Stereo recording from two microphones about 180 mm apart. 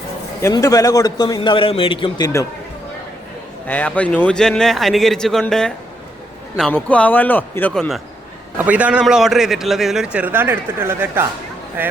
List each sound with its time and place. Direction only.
0.4 s a man's voice: 20° left (ahead or behind)
3.7 s a man's voice: 10° left (ahead or behind); by 11.9 s 10° right (ahead or behind)